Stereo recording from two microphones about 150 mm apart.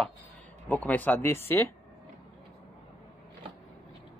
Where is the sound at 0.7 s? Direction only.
10° left (ahead or behind).